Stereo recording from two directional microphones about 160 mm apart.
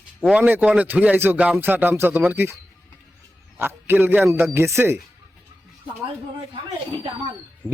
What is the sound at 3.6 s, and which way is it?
A man's voice, 15° right (ahead or behind).